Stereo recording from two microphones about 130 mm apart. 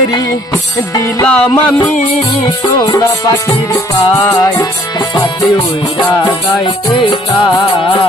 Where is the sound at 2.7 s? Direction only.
25° left (ahead or behind).